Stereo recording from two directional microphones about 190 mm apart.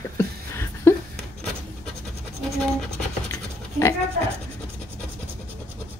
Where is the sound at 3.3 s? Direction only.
15° left (ahead or behind).